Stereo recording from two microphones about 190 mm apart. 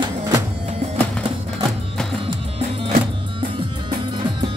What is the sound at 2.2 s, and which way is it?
Music, 30° right (ahead or behind).